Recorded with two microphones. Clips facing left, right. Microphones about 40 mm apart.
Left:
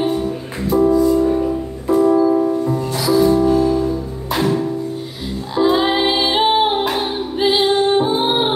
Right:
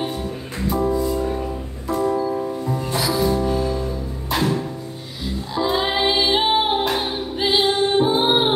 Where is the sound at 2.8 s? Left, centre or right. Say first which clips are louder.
Left 4 dB; centre.